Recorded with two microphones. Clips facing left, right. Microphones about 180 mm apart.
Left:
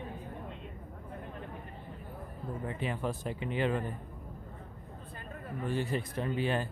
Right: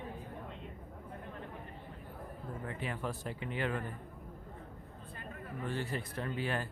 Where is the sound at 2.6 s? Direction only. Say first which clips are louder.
Left 4 dB; 20° left (ahead or behind).